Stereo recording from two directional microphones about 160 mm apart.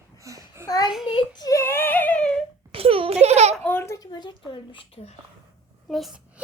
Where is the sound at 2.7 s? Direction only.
35° right (ahead or behind).